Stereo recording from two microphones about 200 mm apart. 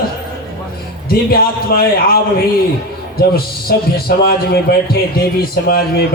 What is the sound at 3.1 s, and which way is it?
A man's voice, 50° left (ahead or behind).